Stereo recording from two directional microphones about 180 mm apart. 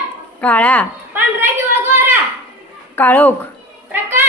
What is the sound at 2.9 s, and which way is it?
Speech, 10° left (ahead or behind).